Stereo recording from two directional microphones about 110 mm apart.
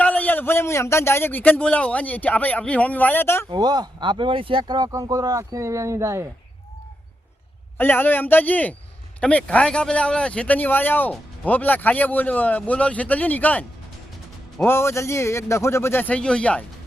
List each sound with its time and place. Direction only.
0.0 s a man's voice: 15° left (ahead or behind)
3.5 s speech: 40° right (ahead or behind)
7.8 s a man's voice: 20° left (ahead or behind)